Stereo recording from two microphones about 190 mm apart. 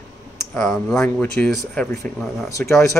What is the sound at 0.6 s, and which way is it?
Speech, centre (ahead or behind).